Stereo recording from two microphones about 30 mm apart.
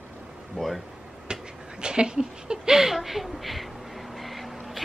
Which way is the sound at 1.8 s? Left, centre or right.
Right.